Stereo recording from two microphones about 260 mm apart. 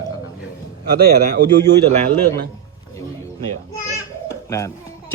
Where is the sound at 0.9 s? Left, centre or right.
Right.